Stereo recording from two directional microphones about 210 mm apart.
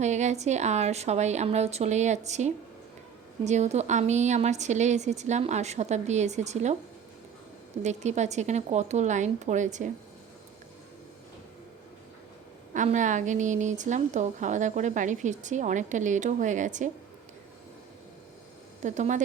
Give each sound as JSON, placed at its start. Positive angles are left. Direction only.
{"t": 0.0, "sound": "a woman's voice", "side_deg": -35}
{"t": 7.8, "sound": "a woman's voice", "side_deg": -35}
{"t": 12.7, "sound": "a woman's voice", "side_deg": -35}
{"t": 18.8, "sound": "speech", "side_deg": -35}